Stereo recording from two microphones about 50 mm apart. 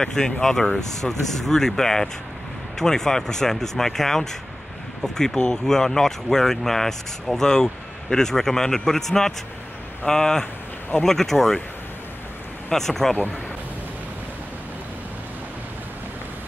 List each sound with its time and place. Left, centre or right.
0.0 s speech: centre
10.4 s a sound: left
11.1 s speech: centre
12.7 s speech: centre